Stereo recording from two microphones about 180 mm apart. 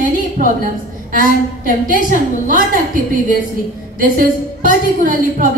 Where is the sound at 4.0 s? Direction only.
50° right (ahead or behind).